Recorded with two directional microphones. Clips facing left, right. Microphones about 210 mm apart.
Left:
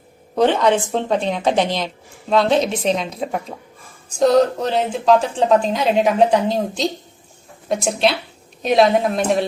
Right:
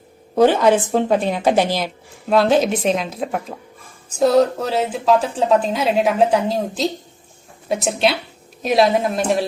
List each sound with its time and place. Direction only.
0.3 s a woman's voice: 5° right (ahead or behind)